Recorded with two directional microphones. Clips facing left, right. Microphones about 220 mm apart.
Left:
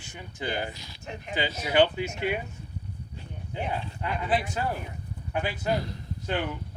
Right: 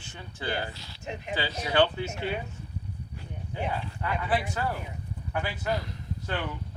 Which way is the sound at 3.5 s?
20° left (ahead or behind).